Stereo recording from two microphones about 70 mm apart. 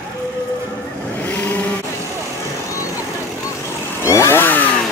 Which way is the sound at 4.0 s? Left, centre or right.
Left.